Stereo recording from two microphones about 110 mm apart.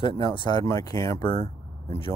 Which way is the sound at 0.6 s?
35° left (ahead or behind).